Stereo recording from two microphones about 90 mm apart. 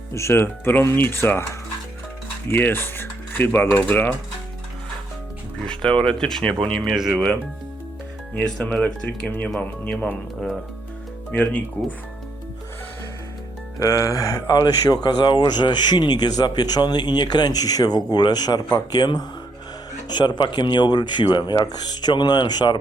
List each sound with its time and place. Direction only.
0.1 s speech: 30° left (ahead or behind)
2.5 s speech: 25° left (ahead or behind)
6.0 s speech: 5° left (ahead or behind)
6.8 s speech: 5° right (ahead or behind)
8.4 s speech: 10° left (ahead or behind)
11.3 s speech: 20° left (ahead or behind)
13.7 s speech: 35° left (ahead or behind); by 22.8 s 50° left (ahead or behind)